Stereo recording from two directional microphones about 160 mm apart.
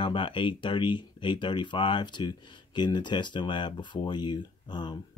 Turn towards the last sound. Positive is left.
turn(degrees=30)  # may be behind; listen again after turning